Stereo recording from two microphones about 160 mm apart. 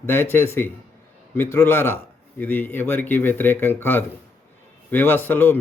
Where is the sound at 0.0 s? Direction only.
15° left (ahead or behind).